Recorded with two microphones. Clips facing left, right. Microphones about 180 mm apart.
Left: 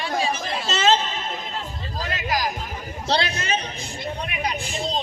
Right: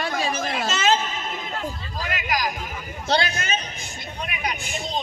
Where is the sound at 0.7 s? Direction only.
30° left (ahead or behind).